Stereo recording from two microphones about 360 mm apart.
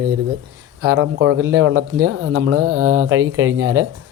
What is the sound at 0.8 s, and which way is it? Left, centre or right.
Speech, right.